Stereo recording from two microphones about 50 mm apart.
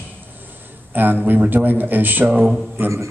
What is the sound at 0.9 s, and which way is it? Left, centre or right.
A man's voice, right.